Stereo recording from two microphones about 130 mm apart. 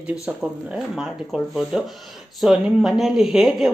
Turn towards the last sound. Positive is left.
turn(degrees=0)  # may be behind; listen again after turning